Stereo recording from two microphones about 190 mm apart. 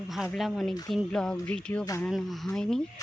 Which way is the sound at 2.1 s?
Centre (ahead or behind).